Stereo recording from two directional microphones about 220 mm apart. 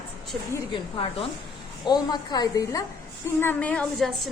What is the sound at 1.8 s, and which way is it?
A woman's voice, 20° left (ahead or behind).